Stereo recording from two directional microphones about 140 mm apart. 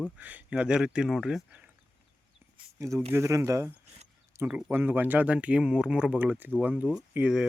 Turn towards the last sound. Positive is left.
turn(degrees=-5)  # may be behind; listen again after turning